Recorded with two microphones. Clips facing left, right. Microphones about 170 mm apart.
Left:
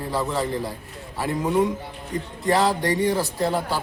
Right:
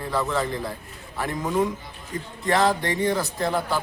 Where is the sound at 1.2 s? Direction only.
10° left (ahead or behind).